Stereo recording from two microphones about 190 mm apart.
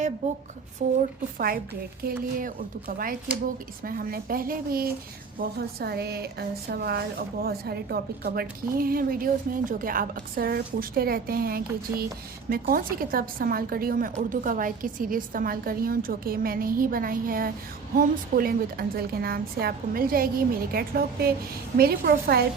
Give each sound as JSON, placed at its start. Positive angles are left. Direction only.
{"t": 0.2, "sound": "a woman's voice", "side_deg": -35}